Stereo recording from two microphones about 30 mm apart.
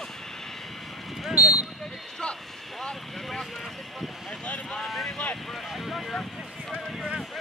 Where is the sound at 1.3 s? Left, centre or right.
Right.